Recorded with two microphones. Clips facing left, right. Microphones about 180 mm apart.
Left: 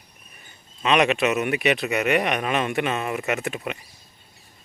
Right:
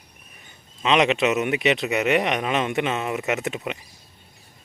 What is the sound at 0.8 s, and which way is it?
Speech, 20° right (ahead or behind).